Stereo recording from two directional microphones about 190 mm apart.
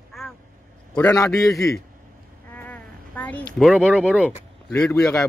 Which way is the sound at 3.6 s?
5° left (ahead or behind).